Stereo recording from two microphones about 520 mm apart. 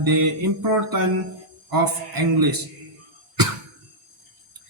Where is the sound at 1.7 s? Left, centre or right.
Right.